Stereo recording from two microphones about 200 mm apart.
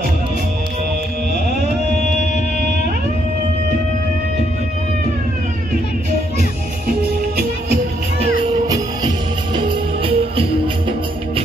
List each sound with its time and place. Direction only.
8.6 s music: 20° right (ahead or behind)